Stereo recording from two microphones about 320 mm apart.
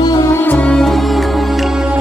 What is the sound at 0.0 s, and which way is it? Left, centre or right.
Music, centre.